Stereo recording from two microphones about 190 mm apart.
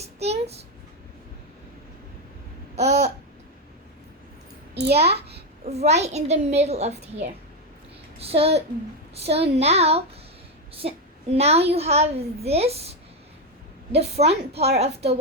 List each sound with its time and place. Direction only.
0.0 s a child's voice: 35° right (ahead or behind)
2.7 s a woman's voice: 35° right (ahead or behind)
4.7 s a child's voice: 60° right (ahead or behind)
4.9 s a woman's voice: 30° right (ahead or behind)
11.3 s a woman's voice: 35° right (ahead or behind)
13.9 s a woman's voice: 35° right (ahead or behind)